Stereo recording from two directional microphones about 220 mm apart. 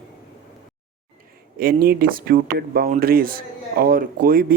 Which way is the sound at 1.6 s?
45° right (ahead or behind).